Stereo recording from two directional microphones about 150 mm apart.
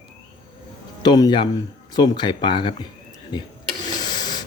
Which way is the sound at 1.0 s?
25° left (ahead or behind).